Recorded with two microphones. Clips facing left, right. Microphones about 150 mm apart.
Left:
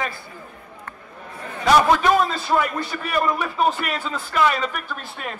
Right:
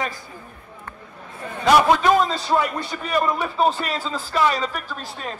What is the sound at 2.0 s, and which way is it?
A man's voice, 30° right (ahead or behind).